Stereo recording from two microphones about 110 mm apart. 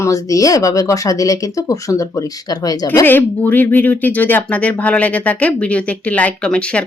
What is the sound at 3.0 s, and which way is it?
Speech, 15° left (ahead or behind).